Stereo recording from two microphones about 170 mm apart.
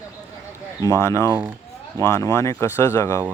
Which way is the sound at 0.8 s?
20° left (ahead or behind).